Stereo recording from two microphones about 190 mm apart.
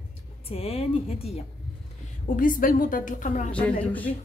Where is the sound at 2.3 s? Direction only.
45° left (ahead or behind).